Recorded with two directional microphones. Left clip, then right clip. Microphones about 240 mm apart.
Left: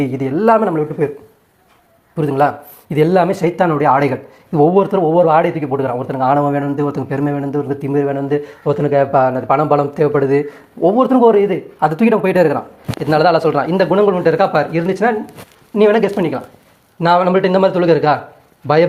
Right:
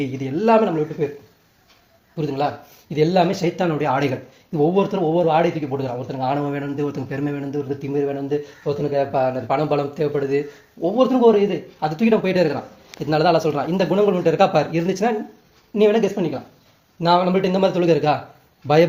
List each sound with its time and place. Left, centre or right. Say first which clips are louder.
0.0 s speech: left 6 dB; centre
2.1 s speech: left 8 dB; left
13.1 s speech: left 5 dB; centre